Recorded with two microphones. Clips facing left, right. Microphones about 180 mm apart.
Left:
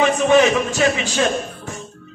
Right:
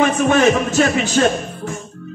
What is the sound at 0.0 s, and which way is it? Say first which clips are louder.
Speech: even; 50° right (ahead or behind).